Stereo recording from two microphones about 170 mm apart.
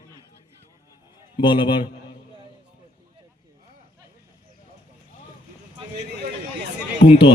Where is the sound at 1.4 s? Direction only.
30° left (ahead or behind).